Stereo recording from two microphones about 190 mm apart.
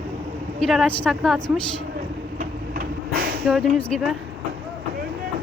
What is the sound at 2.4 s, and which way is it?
Vehicle, 50° right (ahead or behind).